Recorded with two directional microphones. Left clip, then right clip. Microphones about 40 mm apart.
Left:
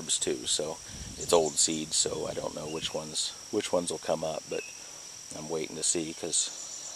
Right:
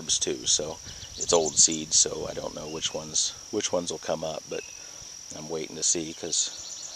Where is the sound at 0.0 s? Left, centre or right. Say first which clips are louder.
Right 3 dB; centre.